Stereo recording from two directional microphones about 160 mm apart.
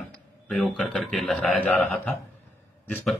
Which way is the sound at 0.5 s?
5° left (ahead or behind).